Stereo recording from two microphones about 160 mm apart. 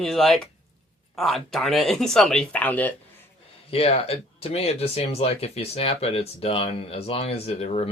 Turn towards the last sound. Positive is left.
turn(degrees=40)  # may be behind; listen again after turning